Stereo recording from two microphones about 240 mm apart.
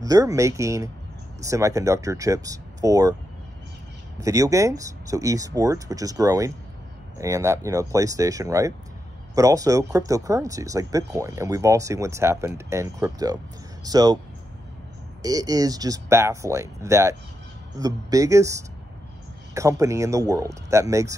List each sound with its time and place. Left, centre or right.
0.0 s speech: centre
4.2 s speech: centre
15.2 s speech: centre